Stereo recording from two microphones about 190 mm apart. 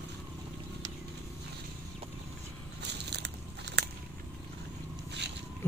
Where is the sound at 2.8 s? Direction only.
60° right (ahead or behind).